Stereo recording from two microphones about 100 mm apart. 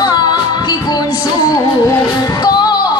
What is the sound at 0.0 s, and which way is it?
Music, 45° left (ahead or behind).